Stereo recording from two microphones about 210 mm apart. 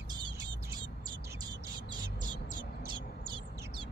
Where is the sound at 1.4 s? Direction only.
20° right (ahead or behind).